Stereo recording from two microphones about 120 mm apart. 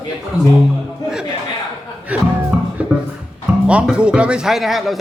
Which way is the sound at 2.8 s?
10° right (ahead or behind).